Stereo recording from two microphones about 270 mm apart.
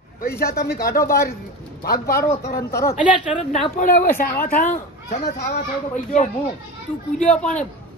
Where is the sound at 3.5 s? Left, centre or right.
Left.